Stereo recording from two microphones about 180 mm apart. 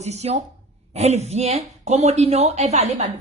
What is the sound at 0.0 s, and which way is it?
A woman's voice, 35° right (ahead or behind).